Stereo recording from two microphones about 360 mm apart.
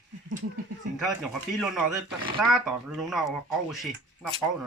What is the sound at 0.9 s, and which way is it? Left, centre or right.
Speech, centre.